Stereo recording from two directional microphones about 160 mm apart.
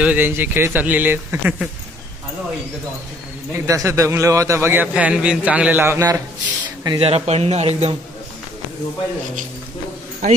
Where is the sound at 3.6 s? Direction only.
20° right (ahead or behind).